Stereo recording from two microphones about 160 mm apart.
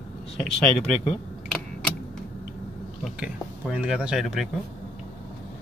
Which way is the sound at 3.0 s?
5° right (ahead or behind).